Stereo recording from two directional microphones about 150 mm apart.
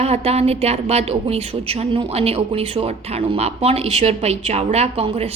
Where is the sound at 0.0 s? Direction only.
45° right (ahead or behind).